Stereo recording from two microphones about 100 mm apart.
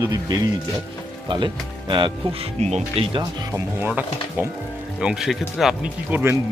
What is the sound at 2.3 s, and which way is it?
Speech, 75° right (ahead or behind).